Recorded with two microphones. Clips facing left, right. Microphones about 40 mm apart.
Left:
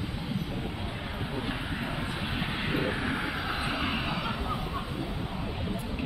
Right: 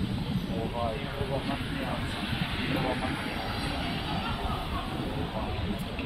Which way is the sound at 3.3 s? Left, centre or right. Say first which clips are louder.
Left 2 dB; left.